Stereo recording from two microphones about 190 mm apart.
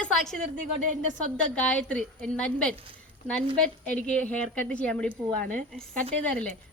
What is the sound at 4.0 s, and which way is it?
Speech, 5° left (ahead or behind).